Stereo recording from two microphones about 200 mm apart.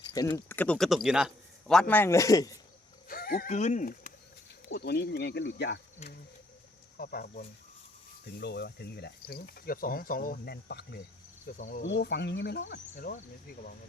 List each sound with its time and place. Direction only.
0.0 s a man's voice: 20° left (ahead or behind)
3.1 s speech: 45° left (ahead or behind)
4.7 s speech: 55° left (ahead or behind)
6.0 s speech: 35° left (ahead or behind)
6.9 s speech: 50° left (ahead or behind)
11.4 s speech: 40° left (ahead or behind)
11.9 s speech: 60° left (ahead or behind)
12.7 s speech: 40° left (ahead or behind)